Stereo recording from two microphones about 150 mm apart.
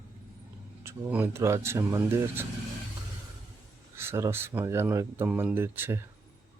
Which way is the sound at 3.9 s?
15° right (ahead or behind).